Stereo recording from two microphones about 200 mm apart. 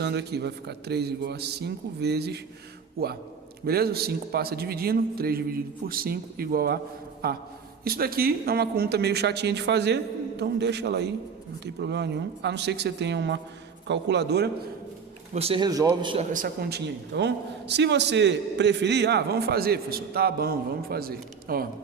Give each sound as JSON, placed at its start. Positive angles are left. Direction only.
{"t": 0.0, "sound": "a man's voice", "side_deg": -55}
{"t": 15.3, "sound": "a man's voice", "side_deg": -30}
{"t": 16.3, "sound": "a man's voice", "side_deg": -45}